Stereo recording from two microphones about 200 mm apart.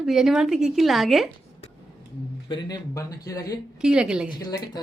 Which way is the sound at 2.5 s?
20° left (ahead or behind).